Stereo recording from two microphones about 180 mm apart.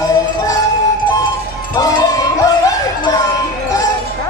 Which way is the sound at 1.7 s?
20° left (ahead or behind).